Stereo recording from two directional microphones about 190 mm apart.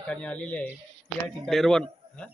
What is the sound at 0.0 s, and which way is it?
Speech, 5° left (ahead or behind).